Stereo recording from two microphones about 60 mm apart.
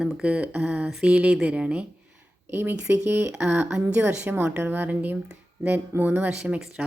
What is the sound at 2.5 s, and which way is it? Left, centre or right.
A woman's voice, right.